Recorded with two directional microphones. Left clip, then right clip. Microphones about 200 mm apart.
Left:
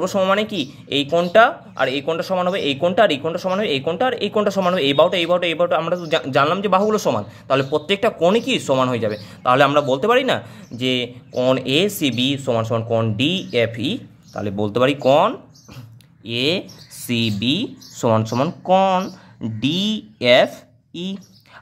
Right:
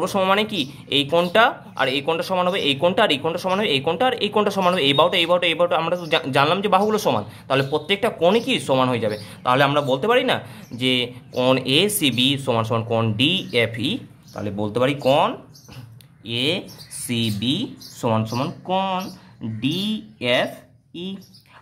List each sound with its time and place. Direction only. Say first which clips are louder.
0.0 s speech: left 1 dB; 5° left (ahead or behind); by 21.2 s 30° left (ahead or behind)